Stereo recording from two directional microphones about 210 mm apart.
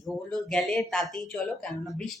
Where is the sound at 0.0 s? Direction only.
5° left (ahead or behind).